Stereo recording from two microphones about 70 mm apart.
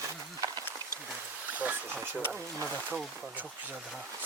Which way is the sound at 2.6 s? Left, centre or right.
Left.